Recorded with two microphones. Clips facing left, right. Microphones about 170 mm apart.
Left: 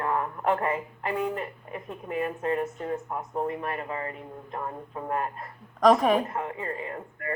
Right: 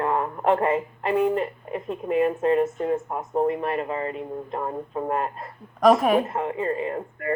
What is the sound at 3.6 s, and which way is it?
Speech, 25° right (ahead or behind).